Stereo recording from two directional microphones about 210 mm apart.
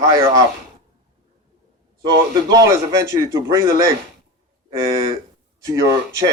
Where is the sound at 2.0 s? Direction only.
20° right (ahead or behind).